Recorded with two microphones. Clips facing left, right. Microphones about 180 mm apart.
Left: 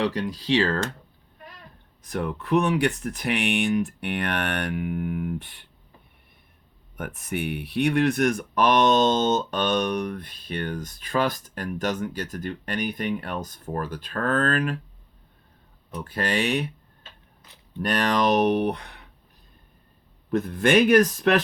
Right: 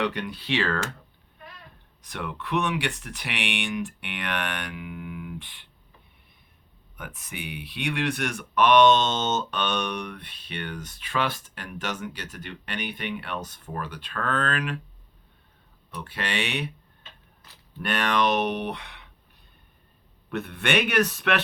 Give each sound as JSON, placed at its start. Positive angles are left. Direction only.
{"t": 0.0, "sound": "speech", "side_deg": 35}
{"t": 2.0, "sound": "speech", "side_deg": 40}
{"t": 6.9, "sound": "speech", "side_deg": 50}
{"t": 16.0, "sound": "speech", "side_deg": 40}
{"t": 17.8, "sound": "speech", "side_deg": 40}
{"t": 20.3, "sound": "speech", "side_deg": 35}